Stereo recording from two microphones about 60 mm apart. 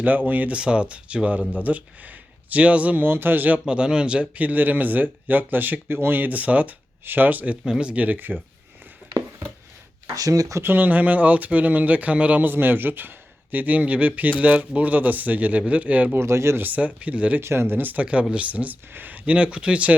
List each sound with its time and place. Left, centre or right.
0.0 s speech: right
3.1 s speech: right
3.7 s speech: centre
10.2 s speech: right
10.6 s speech: right
12.5 s speech: right
16.1 s speech: right
16.6 s speech: right
17.4 s speech: right; by 19.9 s centre